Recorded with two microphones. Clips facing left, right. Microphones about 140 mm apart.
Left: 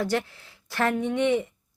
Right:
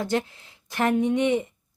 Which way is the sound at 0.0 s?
20° right (ahead or behind).